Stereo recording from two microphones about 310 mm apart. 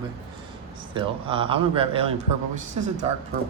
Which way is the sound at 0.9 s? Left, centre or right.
Centre.